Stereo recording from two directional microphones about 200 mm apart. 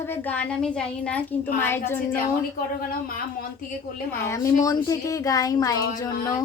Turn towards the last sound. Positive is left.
turn(degrees=20)  # may be behind; listen again after turning